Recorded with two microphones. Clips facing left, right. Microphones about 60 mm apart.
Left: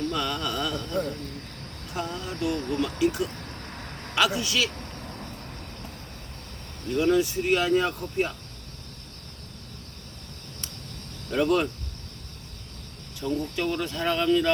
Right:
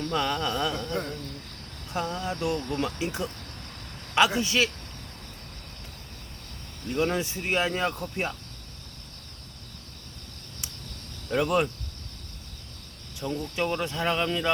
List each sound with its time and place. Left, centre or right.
0.1 s speech: right
2.1 s a man's voice: right
6.9 s speech: right
11.3 s speech: centre
13.1 s speech: centre